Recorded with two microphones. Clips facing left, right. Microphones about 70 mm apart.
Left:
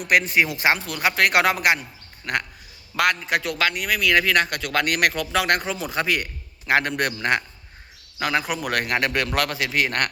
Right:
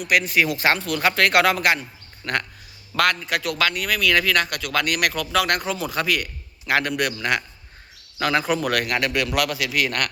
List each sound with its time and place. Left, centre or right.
0.1 s a man's voice: left
8.2 s speech: centre
8.7 s speech: left